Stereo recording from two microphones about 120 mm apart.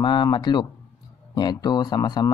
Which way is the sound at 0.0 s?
40° left (ahead or behind).